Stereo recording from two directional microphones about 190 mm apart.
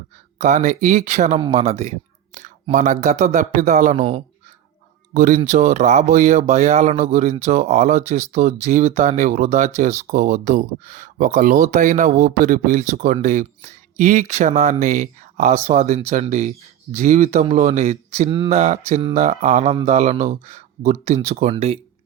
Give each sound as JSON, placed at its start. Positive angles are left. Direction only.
{"t": 0.3, "sound": "speech", "side_deg": -40}
{"t": 5.1, "sound": "speech", "side_deg": -45}